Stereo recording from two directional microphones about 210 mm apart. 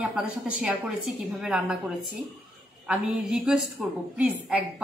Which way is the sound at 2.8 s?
5° right (ahead or behind).